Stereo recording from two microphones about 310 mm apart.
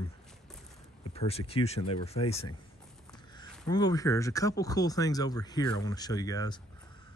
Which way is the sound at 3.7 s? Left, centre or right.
Centre.